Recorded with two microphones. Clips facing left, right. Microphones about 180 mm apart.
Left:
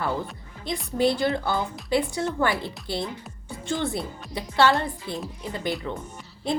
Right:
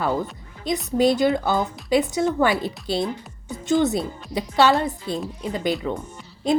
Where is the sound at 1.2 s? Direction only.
20° right (ahead or behind).